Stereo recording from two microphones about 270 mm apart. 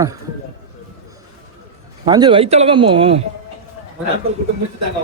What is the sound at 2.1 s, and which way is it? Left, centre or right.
Speech, centre.